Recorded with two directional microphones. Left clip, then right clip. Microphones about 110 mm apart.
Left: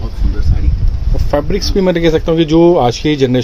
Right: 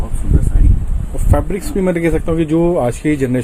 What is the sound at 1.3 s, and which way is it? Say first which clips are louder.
Speech: left 4 dB; 30° left (ahead or behind).